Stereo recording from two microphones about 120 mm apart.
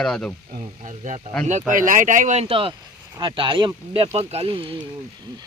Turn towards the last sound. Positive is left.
turn(degrees=-45)  # may be behind; listen again after turning